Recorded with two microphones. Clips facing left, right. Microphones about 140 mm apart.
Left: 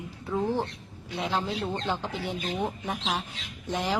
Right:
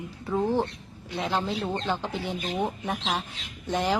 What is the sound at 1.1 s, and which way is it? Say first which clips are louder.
Speech: right 1 dB; centre (ahead or behind).